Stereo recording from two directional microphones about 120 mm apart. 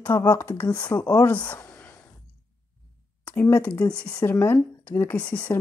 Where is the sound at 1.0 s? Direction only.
30° left (ahead or behind).